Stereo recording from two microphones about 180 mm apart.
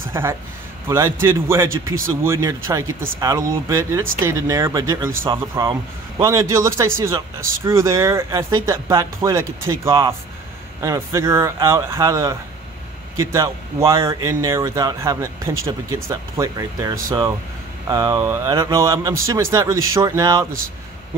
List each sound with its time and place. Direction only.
0.1 s speech: 15° right (ahead or behind)